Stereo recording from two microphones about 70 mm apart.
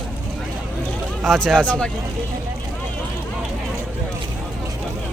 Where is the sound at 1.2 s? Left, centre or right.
Centre.